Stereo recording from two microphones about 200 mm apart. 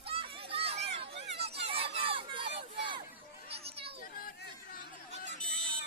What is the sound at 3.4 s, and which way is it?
Children playing, 30° right (ahead or behind).